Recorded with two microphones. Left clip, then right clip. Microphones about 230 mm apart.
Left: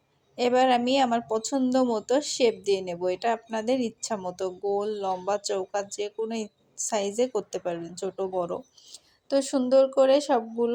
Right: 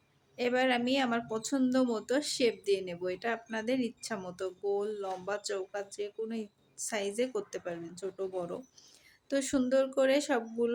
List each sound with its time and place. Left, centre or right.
0.3 s speech: centre